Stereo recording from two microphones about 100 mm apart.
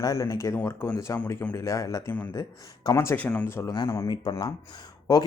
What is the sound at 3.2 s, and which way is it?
Speech, 15° left (ahead or behind).